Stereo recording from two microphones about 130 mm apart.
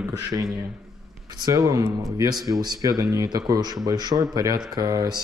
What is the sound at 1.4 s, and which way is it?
Speech, 25° right (ahead or behind).